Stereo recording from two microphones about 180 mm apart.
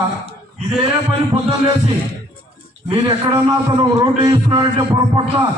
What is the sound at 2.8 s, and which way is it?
A man's voice, 30° right (ahead or behind).